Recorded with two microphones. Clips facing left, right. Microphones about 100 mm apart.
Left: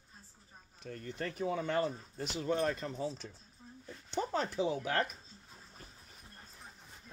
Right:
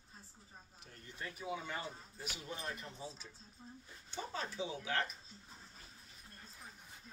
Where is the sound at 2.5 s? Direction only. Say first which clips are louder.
Left 14 dB; 75° left (ahead or behind).